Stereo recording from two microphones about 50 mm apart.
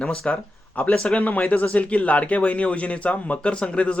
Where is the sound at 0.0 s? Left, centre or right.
Left.